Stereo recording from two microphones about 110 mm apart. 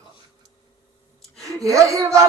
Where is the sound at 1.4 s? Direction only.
30° right (ahead or behind).